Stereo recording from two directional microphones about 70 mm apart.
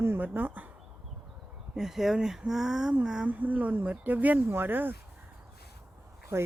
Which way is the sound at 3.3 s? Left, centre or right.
Right.